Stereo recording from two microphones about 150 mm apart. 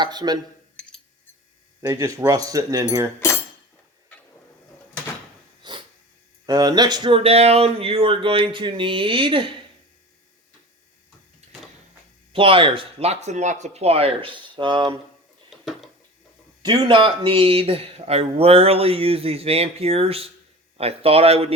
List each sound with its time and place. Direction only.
0.0 s speech: 25° right (ahead or behind)
0.8 s cutlery: 5° left (ahead or behind)
1.8 s speech: 20° right (ahead or behind)
5.6 s snort: 30° right (ahead or behind)
6.4 s speech: 25° right (ahead or behind)
12.3 s speech: 35° right (ahead or behind)
15.4 s a sound: centre (ahead or behind)
16.6 s speech: 35° right (ahead or behind)